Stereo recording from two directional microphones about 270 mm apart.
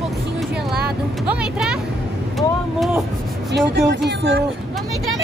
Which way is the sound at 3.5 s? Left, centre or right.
Right.